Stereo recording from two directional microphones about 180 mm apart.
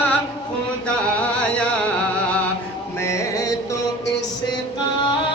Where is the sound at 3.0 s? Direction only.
15° left (ahead or behind).